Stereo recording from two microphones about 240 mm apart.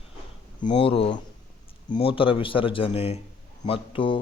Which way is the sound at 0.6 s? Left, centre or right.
Left.